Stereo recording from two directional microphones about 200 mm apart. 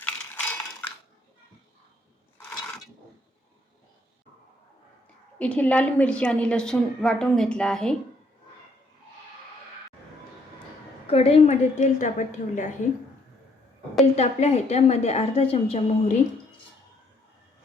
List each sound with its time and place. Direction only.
0.0 s cutlery: 10° left (ahead or behind)
5.4 s a woman's voice: 5° left (ahead or behind)
11.0 s a woman's voice: 30° left (ahead or behind)
14.2 s a woman's voice: 35° left (ahead or behind)